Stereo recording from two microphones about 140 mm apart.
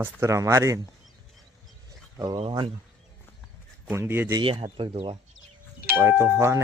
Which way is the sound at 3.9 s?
15° right (ahead or behind).